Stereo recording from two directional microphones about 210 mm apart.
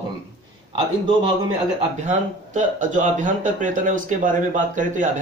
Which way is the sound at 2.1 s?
35° right (ahead or behind).